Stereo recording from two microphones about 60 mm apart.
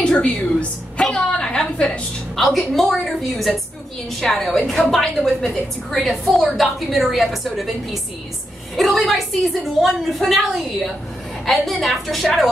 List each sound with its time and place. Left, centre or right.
0.0 s a woman's voice: centre
1.1 s a sound: centre
2.3 s a woman's voice: centre